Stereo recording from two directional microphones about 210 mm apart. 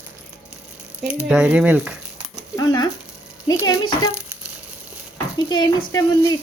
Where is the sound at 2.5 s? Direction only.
20° left (ahead or behind).